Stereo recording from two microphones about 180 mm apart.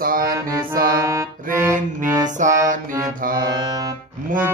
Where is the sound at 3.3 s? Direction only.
20° right (ahead or behind).